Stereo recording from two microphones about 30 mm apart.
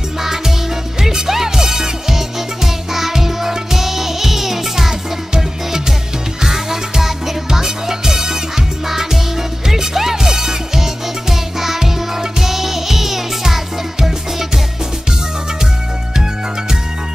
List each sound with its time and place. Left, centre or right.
1.1 s music: centre
8.8 s music: centre